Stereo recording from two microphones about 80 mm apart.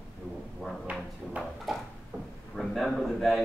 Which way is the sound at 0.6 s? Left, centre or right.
Centre.